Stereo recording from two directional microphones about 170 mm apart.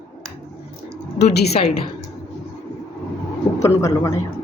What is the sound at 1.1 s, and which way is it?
Speech, 80° left.